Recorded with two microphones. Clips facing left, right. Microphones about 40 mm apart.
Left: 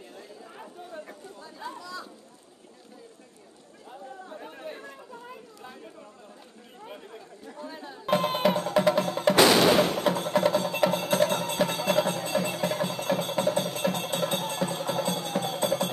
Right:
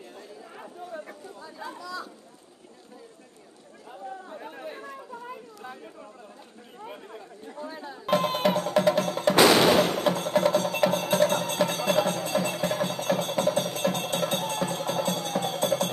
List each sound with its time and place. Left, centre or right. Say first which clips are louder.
1.6 s chatter: right 2 dB; right
4.7 s chatter: left 1 dB; centre
6.9 s chatter: even; centre
7.5 s music: right 2 dB; right
8.0 s music: even; centre